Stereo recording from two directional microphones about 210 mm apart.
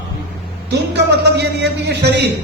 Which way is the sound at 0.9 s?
55° right (ahead or behind).